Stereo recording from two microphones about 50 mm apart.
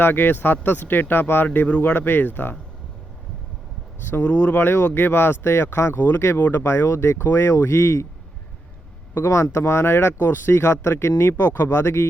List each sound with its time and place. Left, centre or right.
0.0 s speech: left
4.1 s speech: left
9.1 s speech: left